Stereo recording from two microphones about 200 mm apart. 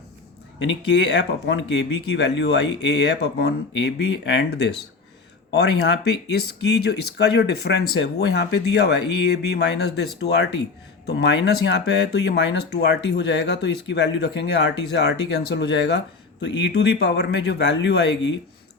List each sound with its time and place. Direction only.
0.6 s speech: 65° left (ahead or behind)